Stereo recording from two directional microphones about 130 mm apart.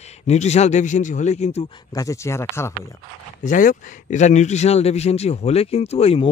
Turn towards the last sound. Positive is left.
turn(degrees=50)  # may be behind; listen again after turning